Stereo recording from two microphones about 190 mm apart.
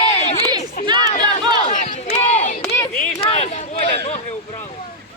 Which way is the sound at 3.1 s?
30° left (ahead or behind).